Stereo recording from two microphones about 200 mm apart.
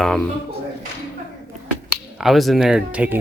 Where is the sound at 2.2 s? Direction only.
Centre (ahead or behind).